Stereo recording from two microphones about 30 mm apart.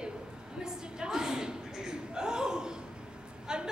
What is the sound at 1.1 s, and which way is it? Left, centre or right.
Chuckle, centre.